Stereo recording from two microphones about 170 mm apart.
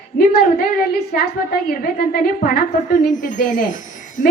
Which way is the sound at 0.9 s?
70° left (ahead or behind).